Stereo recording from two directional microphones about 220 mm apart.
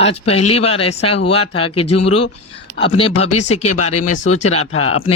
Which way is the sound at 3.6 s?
90° left.